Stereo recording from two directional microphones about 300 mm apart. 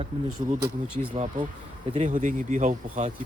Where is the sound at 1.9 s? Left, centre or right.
Right.